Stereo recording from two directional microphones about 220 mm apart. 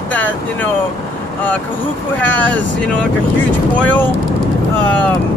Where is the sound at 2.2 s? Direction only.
5° left (ahead or behind).